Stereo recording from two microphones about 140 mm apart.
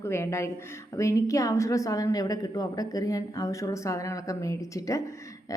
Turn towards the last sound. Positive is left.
turn(degrees=25)  # may be behind; listen again after turning